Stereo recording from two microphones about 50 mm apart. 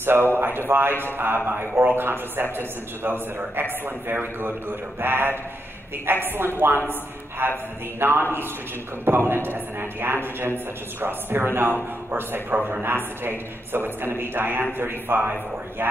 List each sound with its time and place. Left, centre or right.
0.0 s a man's voice: right